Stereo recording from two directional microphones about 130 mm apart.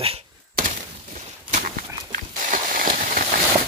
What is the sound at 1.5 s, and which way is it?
Horse, 75° right (ahead or behind).